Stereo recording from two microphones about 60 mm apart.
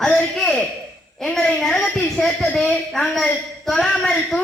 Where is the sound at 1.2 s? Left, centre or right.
Centre.